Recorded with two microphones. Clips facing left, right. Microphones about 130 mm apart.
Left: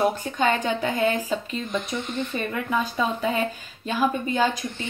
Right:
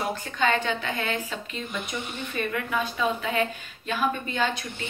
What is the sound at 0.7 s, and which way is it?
A woman's voice, 40° left (ahead or behind).